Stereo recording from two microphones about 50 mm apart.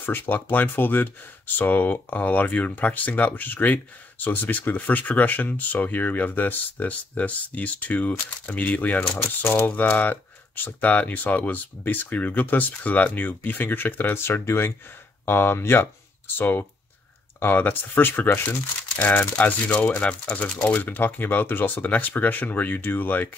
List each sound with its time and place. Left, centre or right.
0.0 s speech: left
16.3 s speech: left
19.0 s speech: left
20.8 s speech: left